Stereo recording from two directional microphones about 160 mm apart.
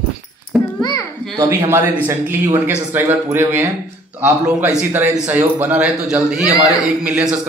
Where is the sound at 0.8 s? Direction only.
25° left (ahead or behind).